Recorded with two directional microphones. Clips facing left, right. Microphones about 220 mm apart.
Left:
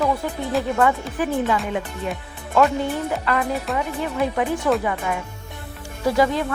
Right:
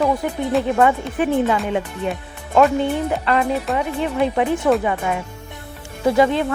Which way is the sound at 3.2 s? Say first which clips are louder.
Right 4 dB; 25° right (ahead or behind).